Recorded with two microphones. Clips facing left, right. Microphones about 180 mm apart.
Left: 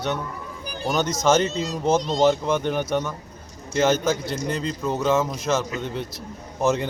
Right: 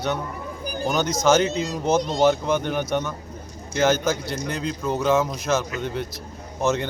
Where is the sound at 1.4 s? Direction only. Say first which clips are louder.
Even; 10° right (ahead or behind).